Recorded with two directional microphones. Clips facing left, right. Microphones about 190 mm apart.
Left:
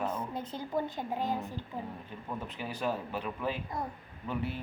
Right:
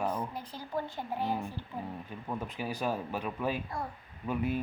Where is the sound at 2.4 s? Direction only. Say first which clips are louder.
Even; 10° right (ahead or behind).